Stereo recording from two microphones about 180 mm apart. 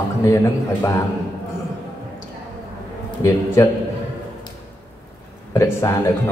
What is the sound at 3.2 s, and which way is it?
Speech, 15° left (ahead or behind).